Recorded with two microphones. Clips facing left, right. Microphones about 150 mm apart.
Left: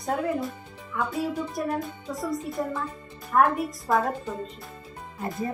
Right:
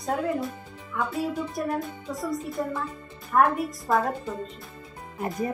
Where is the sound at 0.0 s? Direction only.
Centre (ahead or behind).